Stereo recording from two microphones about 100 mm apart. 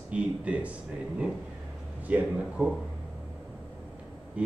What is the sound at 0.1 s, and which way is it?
Speech, 10° right (ahead or behind).